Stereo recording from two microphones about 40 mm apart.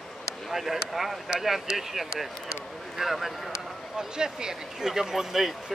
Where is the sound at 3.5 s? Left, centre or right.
Centre.